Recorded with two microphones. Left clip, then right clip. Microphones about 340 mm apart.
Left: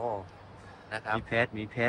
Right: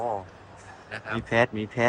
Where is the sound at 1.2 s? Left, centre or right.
Centre.